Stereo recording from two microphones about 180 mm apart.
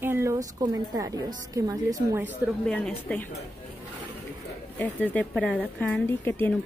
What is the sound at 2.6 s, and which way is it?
Speech, 5° left (ahead or behind).